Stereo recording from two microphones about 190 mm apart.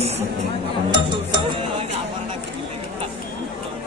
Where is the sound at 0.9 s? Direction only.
25° right (ahead or behind).